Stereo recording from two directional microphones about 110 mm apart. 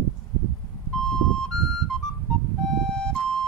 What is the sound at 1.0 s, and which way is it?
Flute, 5° left (ahead or behind).